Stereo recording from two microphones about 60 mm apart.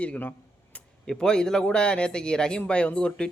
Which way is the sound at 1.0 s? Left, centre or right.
Centre.